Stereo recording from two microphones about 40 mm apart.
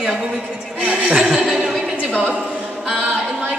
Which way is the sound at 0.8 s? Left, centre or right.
Right.